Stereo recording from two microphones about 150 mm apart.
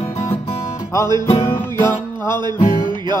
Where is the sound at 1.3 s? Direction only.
20° left (ahead or behind).